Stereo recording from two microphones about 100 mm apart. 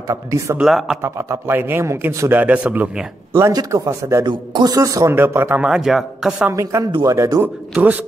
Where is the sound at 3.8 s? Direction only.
30° right (ahead or behind).